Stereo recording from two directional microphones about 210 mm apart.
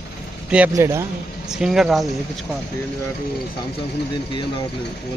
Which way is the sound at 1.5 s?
Centre (ahead or behind).